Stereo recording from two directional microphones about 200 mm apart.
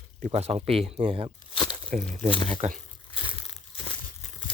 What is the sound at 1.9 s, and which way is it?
Speech, 40° right (ahead or behind).